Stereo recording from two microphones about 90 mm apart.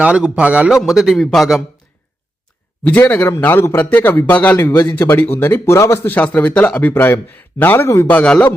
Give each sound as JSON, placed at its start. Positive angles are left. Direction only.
{"t": 0.0, "sound": "a man's voice", "side_deg": -15}
{"t": 0.8, "sound": "a man's voice", "side_deg": -5}
{"t": 2.8, "sound": "speech", "side_deg": 20}
{"t": 6.1, "sound": "speech", "side_deg": 20}
{"t": 8.1, "sound": "speech", "side_deg": 15}